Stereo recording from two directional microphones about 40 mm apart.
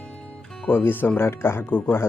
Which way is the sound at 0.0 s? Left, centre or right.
Left.